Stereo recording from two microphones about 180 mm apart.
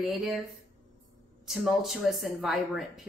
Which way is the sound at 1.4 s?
Centre (ahead or behind).